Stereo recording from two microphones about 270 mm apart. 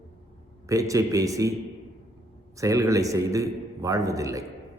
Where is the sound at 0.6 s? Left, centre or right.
Centre.